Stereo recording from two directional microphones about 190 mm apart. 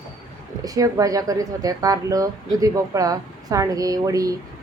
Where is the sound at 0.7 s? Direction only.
15° right (ahead or behind).